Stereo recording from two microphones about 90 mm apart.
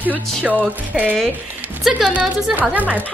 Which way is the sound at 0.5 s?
20° right (ahead or behind).